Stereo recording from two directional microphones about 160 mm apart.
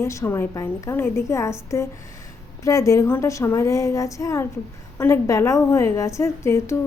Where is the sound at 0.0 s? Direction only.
20° left (ahead or behind).